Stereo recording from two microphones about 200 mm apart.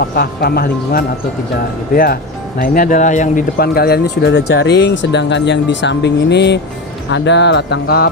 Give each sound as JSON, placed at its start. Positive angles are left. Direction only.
{"t": 0.2, "sound": "speech", "side_deg": 50}
{"t": 2.6, "sound": "speech", "side_deg": 45}